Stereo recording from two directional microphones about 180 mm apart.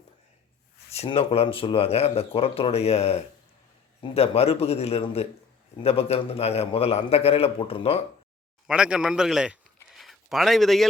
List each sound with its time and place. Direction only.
0.9 s speech: 35° left (ahead or behind)
8.6 s a man's voice: 5° right (ahead or behind)